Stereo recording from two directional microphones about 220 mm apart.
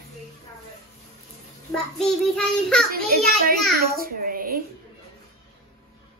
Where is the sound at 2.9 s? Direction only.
40° right (ahead or behind).